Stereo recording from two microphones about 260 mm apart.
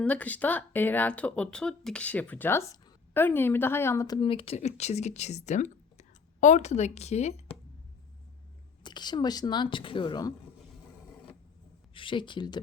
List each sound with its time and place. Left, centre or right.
0.0 s speech: centre; by 7.4 s left
8.8 s speech: centre
11.9 s speech: centre